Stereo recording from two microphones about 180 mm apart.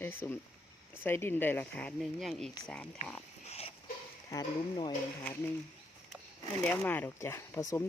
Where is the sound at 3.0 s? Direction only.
35° left (ahead or behind).